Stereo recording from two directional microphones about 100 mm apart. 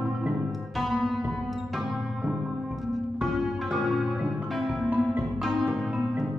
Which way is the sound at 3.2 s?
Centre (ahead or behind).